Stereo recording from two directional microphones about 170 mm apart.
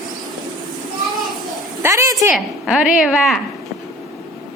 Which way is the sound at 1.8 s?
15° right (ahead or behind).